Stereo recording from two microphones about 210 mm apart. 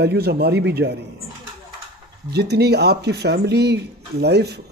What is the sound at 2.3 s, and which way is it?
Speech, 50° right (ahead or behind).